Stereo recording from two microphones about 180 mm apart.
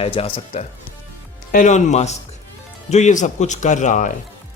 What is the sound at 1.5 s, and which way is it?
Speech, 45° left (ahead or behind).